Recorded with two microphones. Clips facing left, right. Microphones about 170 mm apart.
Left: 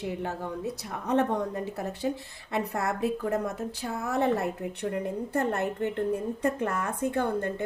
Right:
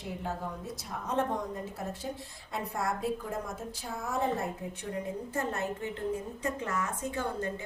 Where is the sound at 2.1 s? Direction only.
80° left.